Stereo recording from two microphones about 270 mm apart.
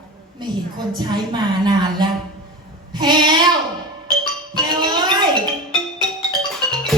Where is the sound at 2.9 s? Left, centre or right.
Centre.